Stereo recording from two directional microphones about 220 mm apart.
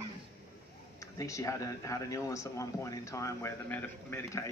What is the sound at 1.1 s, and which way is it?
Speech, 15° left (ahead or behind).